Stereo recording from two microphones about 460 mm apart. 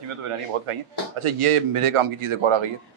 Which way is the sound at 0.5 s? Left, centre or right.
Right.